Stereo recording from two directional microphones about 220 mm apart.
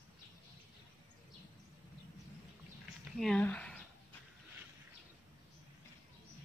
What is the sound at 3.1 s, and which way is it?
Speech, 5° left (ahead or behind).